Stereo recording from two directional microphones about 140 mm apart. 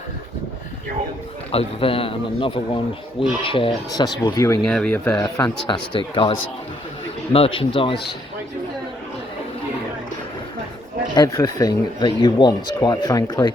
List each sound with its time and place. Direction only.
1.5 s speech: 40° left (ahead or behind)
3.9 s speech: 30° left (ahead or behind)
4.6 s speech: 5° left (ahead or behind)
5.2 s speech: 30° left (ahead or behind)
7.3 s speech: 40° left (ahead or behind)
11.1 s speech: 30° left (ahead or behind)